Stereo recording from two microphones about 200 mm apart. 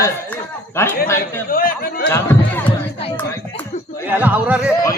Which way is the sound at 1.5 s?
45° left (ahead or behind).